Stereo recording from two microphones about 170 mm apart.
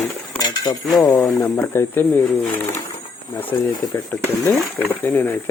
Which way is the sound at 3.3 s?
10° left (ahead or behind).